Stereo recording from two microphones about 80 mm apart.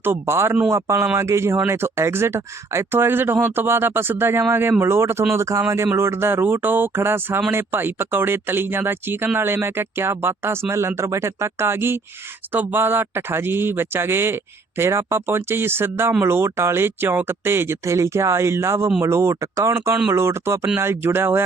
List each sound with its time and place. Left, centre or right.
0.0 s speech: right